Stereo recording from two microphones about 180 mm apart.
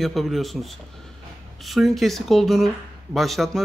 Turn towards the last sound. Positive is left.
turn(degrees=0)  # may be behind; listen again after turning